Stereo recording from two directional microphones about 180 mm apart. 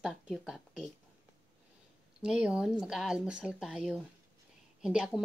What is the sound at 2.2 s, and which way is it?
A woman's voice, 5° right (ahead or behind).